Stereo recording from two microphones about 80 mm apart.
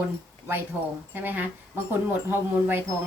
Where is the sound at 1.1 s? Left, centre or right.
Right.